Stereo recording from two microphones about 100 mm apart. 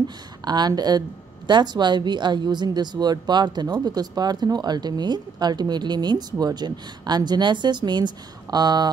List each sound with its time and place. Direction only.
0.5 s a woman's voice: 45° right (ahead or behind)